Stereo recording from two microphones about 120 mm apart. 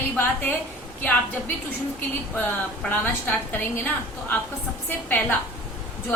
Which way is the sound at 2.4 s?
15° left (ahead or behind).